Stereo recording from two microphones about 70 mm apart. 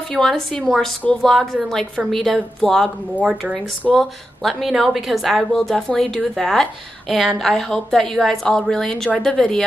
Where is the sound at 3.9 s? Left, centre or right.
Centre.